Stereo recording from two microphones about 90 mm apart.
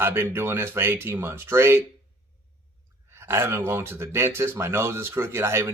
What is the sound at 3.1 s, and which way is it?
Speech, 25° right (ahead or behind).